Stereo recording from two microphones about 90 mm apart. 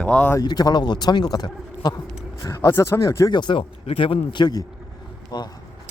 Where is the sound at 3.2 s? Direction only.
55° left (ahead or behind).